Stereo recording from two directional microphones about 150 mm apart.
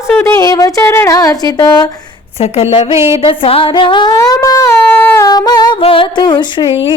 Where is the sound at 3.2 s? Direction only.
40° left (ahead or behind).